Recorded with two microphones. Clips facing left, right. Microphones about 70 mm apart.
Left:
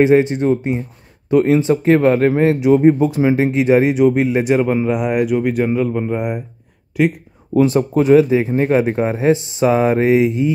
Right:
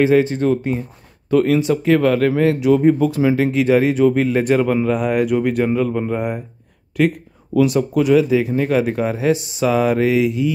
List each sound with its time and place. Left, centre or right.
0.0 s speech: left
7.5 s speech: left